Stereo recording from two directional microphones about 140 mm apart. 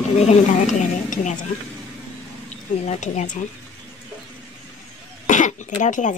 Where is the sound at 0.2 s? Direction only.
55° left (ahead or behind).